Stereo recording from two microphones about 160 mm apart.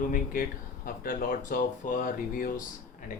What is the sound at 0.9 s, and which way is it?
Speech, 60° left (ahead or behind).